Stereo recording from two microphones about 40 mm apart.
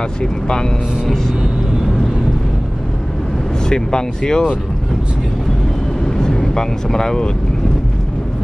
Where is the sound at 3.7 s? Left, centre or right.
Centre.